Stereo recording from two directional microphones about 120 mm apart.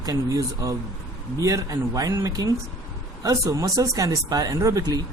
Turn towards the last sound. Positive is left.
turn(degrees=-30)  # may be behind; listen again after turning